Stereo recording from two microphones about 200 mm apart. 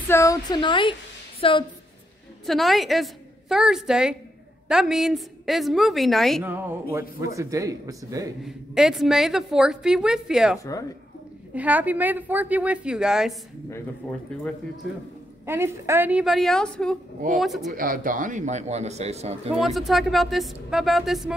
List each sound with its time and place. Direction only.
0.1 s speech: 15° left (ahead or behind)
2.4 s a woman's voice: centre (ahead or behind)
6.4 s speech: 10° right (ahead or behind)
8.5 s a woman's voice: centre (ahead or behind)
14.3 s a woman's voice: 5° left (ahead or behind)
15.4 s a woman's voice: 10° right (ahead or behind)
17.7 s a man's voice: 45° right (ahead or behind)
19.5 s a woman's voice: centre (ahead or behind)